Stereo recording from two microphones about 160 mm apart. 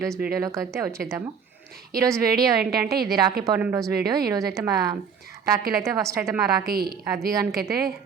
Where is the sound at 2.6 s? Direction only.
75° right (ahead or behind).